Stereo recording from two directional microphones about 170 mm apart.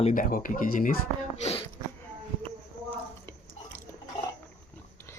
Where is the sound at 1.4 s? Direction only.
35° left (ahead or behind).